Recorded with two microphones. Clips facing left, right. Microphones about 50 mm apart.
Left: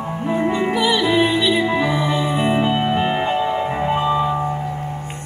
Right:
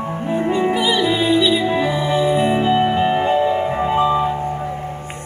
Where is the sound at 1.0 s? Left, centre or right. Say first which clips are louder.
Right 1 dB; left.